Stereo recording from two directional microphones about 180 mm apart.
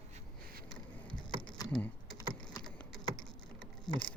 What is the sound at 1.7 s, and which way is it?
Typing, 5° left (ahead or behind).